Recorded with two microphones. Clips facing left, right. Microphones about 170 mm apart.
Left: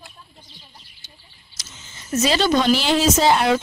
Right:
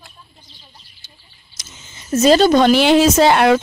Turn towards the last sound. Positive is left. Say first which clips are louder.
# right 5 dB
turn(degrees=-65)  # may be behind; listen again after turning